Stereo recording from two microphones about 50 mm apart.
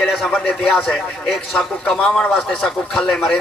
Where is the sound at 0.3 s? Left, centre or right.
Centre.